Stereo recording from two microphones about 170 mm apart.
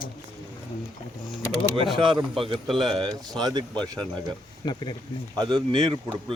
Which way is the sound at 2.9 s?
25° right (ahead or behind).